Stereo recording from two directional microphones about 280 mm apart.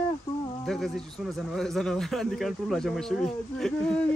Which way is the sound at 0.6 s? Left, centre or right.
Centre.